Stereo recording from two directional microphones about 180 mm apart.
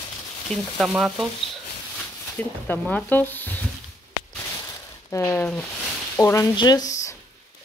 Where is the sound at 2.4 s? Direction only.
10° left (ahead or behind).